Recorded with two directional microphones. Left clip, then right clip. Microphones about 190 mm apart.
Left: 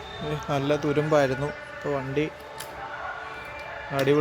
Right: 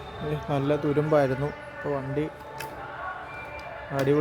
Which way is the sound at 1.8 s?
15° left (ahead or behind).